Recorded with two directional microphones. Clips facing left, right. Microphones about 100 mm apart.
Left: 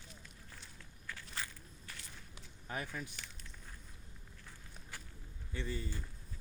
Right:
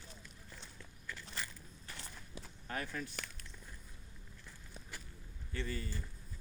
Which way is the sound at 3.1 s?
55° right (ahead or behind).